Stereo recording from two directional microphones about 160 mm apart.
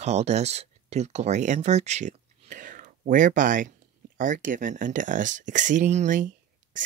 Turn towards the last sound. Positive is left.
turn(degrees=-55)  # may be behind; listen again after turning